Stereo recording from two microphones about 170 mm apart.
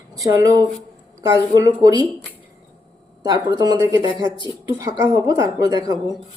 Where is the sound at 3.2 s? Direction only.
25° right (ahead or behind).